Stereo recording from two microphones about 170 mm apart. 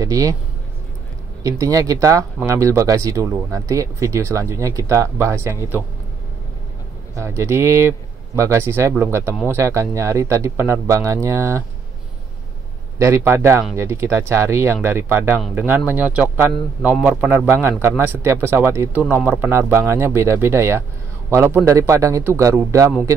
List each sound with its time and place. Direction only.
0.0 s speech: 20° right (ahead or behind)
1.4 s speech: 20° right (ahead or behind)
7.2 s speech: 15° right (ahead or behind)
13.0 s a man's voice: 15° right (ahead or behind)